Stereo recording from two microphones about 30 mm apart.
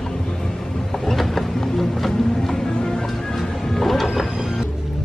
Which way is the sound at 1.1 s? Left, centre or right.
Centre.